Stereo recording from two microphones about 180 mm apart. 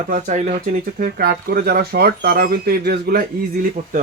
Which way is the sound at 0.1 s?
40° right (ahead or behind).